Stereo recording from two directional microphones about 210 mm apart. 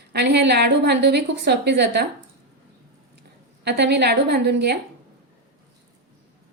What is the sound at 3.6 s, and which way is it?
A woman's voice, 55° right (ahead or behind).